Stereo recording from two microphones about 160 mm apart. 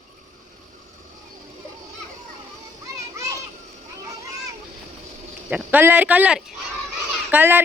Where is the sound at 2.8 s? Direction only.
20° right (ahead or behind).